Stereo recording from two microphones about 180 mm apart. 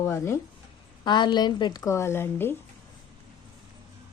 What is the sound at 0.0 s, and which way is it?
A woman's voice, 15° left (ahead or behind).